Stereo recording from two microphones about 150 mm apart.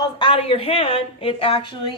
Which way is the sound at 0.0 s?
35° left (ahead or behind).